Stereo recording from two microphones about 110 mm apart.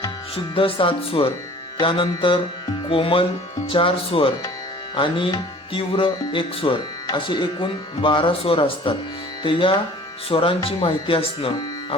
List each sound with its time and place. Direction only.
0.5 s speech: 55° left (ahead or behind)